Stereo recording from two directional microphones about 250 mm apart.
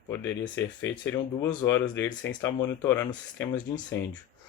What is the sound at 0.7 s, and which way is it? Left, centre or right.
Speech, left.